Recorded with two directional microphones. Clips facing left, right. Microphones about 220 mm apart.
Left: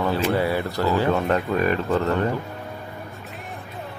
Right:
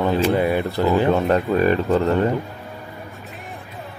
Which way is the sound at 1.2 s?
30° right (ahead or behind).